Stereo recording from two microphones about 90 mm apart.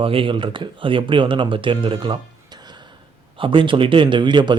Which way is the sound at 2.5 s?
50° right (ahead or behind).